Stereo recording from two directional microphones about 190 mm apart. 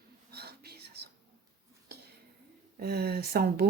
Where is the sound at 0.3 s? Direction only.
55° right (ahead or behind).